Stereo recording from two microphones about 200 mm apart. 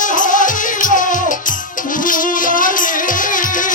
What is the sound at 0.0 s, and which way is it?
Music, 40° left (ahead or behind).